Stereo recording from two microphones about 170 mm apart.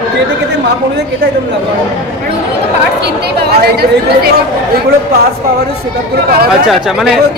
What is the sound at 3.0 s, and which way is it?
Speech, 70° right (ahead or behind).